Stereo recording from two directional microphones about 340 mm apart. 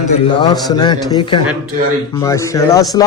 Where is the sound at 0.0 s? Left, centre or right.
Centre.